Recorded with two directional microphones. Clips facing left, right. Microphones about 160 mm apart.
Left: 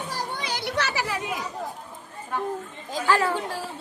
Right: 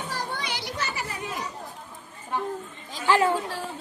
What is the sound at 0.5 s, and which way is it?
Children playing, 70° left (ahead or behind).